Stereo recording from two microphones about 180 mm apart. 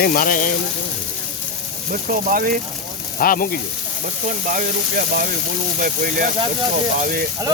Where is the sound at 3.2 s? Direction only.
50° left (ahead or behind).